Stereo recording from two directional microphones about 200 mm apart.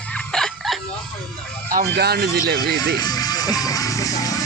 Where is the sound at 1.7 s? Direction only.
50° right (ahead or behind).